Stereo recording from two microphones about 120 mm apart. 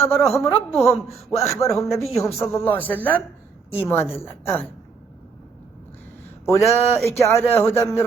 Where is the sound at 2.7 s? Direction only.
15° left (ahead or behind).